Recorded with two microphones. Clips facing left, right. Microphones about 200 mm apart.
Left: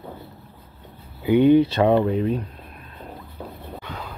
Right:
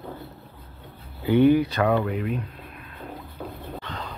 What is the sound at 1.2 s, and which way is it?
Speech, 15° left (ahead or behind).